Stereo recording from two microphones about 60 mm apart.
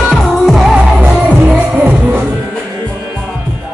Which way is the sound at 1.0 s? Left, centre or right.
Right.